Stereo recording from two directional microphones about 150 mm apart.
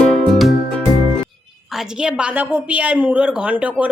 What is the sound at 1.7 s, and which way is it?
A woman's voice, 5° right (ahead or behind).